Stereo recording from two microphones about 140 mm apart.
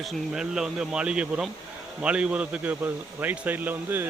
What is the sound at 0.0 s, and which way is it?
A man's voice, centre (ahead or behind).